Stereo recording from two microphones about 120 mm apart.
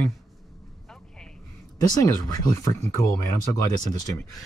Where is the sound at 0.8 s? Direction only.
5° left (ahead or behind).